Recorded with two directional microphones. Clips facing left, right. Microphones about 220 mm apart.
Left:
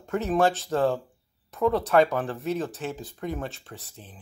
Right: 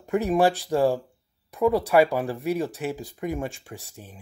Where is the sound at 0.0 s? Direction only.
15° right (ahead or behind).